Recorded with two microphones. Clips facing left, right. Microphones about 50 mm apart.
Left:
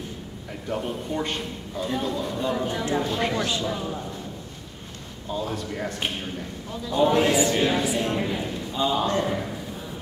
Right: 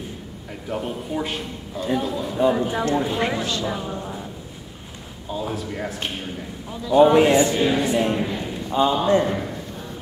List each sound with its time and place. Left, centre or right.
0.7 s a man's voice: centre
5.3 s a man's voice: centre
7.4 s a man's voice: centre
8.3 s a sound: centre
8.9 s a man's voice: centre